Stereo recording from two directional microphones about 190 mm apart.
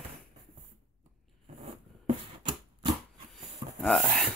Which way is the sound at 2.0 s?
25° right (ahead or behind).